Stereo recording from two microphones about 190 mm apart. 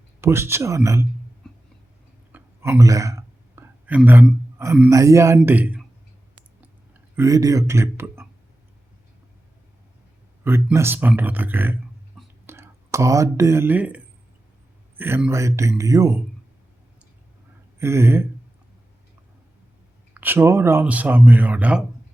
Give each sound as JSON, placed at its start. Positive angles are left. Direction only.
{"t": 0.2, "sound": "speech", "side_deg": -15}
{"t": 2.3, "sound": "a sound", "side_deg": -15}
{"t": 4.5, "sound": "speech", "side_deg": -15}
{"t": 7.2, "sound": "speech", "side_deg": -15}
{"t": 10.4, "sound": "speech", "side_deg": -10}
{"t": 17.7, "sound": "speech", "side_deg": -15}
{"t": 20.1, "sound": "speech", "side_deg": -10}